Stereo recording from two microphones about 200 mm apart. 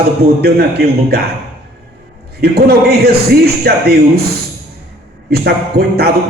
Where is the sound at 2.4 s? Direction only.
55° right (ahead or behind).